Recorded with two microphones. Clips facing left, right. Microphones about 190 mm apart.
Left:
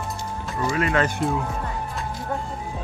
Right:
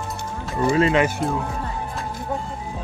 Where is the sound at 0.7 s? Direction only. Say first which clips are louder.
Right 5 dB; 25° right (ahead or behind).